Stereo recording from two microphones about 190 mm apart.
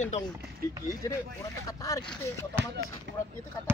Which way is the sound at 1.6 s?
15° left (ahead or behind).